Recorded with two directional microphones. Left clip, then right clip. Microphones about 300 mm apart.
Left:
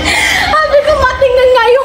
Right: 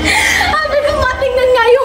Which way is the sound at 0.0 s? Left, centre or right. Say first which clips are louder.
Left 1 dB; centre.